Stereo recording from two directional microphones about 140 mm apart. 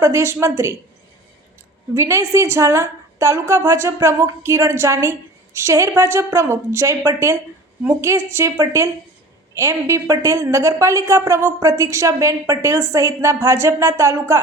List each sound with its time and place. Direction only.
0.0 s a woman's voice: 20° right (ahead or behind)
2.0 s a woman's voice: 20° right (ahead or behind)